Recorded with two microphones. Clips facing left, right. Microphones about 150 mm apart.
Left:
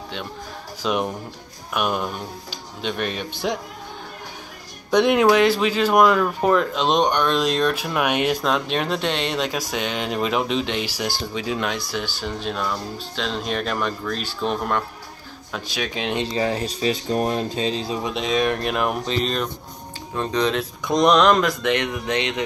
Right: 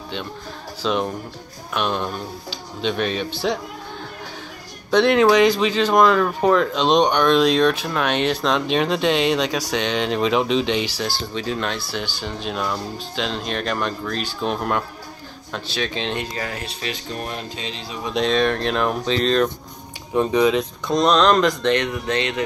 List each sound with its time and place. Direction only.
0.8 s speech: 10° left (ahead or behind)
4.9 s speech: 10° left (ahead or behind)
15.5 s speech: 10° left (ahead or behind)
16.2 s speech: 25° left (ahead or behind)
16.6 s speech: 40° left (ahead or behind)
18.1 s speech: 10° left (ahead or behind)
20.2 s speech: 10° right (ahead or behind)
20.8 s speech: 15° left (ahead or behind)